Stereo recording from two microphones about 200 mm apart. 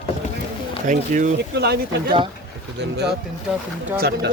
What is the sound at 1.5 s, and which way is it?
Speech, 55° right (ahead or behind).